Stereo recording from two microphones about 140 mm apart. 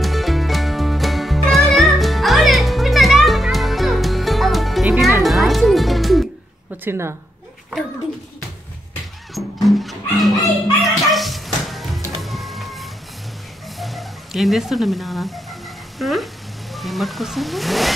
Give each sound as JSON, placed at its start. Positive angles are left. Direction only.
{"t": 0.0, "sound": "music", "side_deg": 0}
{"t": 6.8, "sound": "a woman's voice", "side_deg": -20}
{"t": 9.3, "sound": "music", "side_deg": 0}
{"t": 13.7, "sound": "speech", "side_deg": 0}